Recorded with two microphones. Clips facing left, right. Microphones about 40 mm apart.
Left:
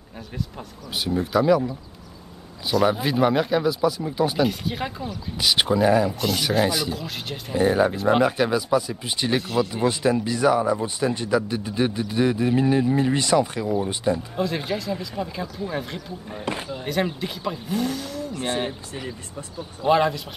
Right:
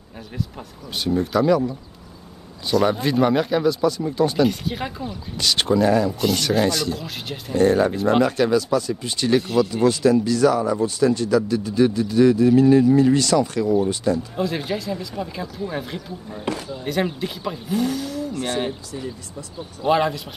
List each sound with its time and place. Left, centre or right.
0.6 s speech: centre
5.4 s speech: centre
14.3 s speech: centre
16.3 s speech: left
16.8 s speech: centre
18.3 s speech: left
19.8 s speech: centre